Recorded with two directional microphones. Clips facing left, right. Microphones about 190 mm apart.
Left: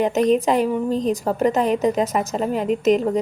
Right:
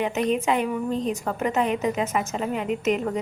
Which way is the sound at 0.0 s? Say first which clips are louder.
Left 6 dB; 40° left (ahead or behind).